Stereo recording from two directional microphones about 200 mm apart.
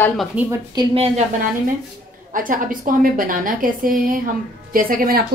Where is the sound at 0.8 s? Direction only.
30° right (ahead or behind).